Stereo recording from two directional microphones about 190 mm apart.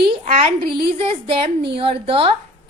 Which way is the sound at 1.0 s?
30° right (ahead or behind).